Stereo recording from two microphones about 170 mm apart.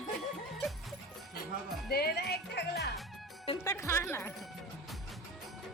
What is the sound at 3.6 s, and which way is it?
Speech, 15° left (ahead or behind).